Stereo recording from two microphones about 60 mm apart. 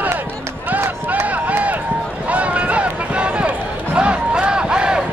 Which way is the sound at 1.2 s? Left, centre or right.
Right.